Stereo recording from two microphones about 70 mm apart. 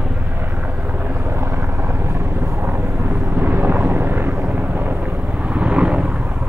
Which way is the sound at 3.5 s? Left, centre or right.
Right.